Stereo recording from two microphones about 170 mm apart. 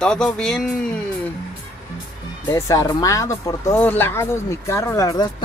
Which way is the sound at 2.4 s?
20° left (ahead or behind).